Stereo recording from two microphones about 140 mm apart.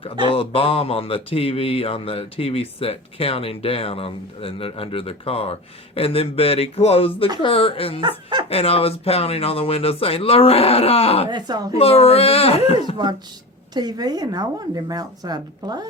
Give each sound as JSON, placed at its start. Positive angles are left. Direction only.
{"t": 0.0, "sound": "speech", "side_deg": 40}
{"t": 11.3, "sound": "speech", "side_deg": -30}
{"t": 11.8, "sound": "speech", "side_deg": 45}
{"t": 13.7, "sound": "speech", "side_deg": -30}